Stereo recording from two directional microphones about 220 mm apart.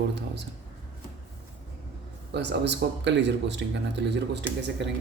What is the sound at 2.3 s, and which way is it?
Speech, 50° right (ahead or behind).